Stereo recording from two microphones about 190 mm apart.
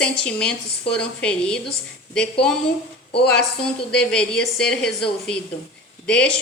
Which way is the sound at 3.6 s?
5° left (ahead or behind).